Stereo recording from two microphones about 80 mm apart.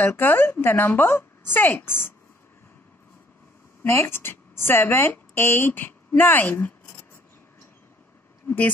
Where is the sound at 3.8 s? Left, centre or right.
Left.